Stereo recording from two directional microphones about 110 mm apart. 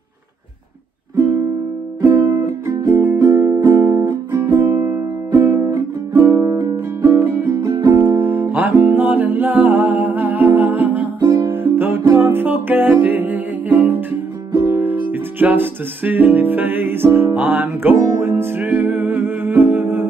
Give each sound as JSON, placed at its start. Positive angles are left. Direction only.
{"t": 2.0, "sound": "music", "side_deg": -30}
{"t": 8.0, "sound": "music", "side_deg": -20}
{"t": 11.1, "sound": "music", "side_deg": -30}